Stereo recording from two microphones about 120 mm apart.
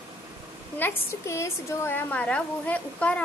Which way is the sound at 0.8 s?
25° left (ahead or behind).